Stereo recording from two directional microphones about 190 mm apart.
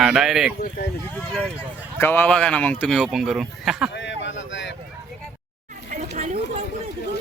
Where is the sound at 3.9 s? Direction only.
70° left (ahead or behind).